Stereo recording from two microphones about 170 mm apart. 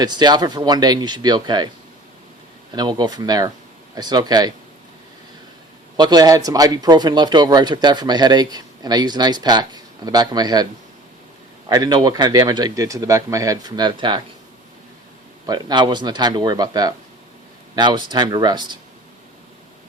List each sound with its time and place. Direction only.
0.0 s speech: 25° right (ahead or behind)
2.7 s speech: 25° right (ahead or behind)
6.0 s speech: 25° right (ahead or behind)
11.7 s speech: 25° right (ahead or behind)
15.4 s speech: 25° right (ahead or behind)